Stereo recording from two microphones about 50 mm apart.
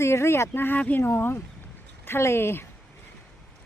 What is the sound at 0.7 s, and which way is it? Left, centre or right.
Speech, left.